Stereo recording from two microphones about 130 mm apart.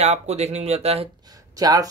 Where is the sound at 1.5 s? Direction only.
30° right (ahead or behind).